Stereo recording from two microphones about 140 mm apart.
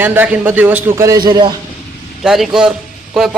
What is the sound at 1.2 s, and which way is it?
Speech, 30° right (ahead or behind).